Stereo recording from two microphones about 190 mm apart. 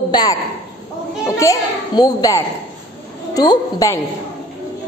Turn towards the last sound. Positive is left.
turn(degrees=20)  # may be behind; listen again after turning